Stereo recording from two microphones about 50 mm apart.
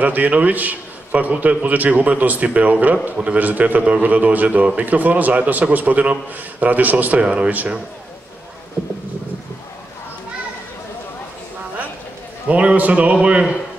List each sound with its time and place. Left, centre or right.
0.0 s a man's voice: right
7.2 s a man's voice: right
12.4 s a man's voice: right